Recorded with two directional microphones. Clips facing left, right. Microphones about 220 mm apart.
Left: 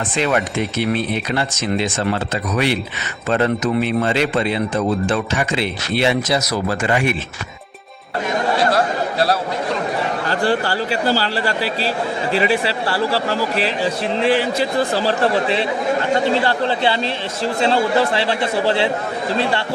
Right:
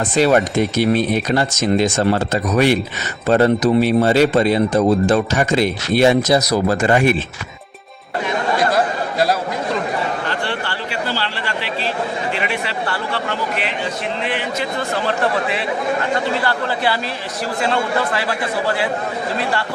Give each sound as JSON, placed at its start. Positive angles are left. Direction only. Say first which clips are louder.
{"t": 0.2, "sound": "a man's voice", "louder": "right 5 dB", "side_deg": -40}
{"t": 10.2, "sound": "a man's voice", "louder": "left 5 dB", "side_deg": 40}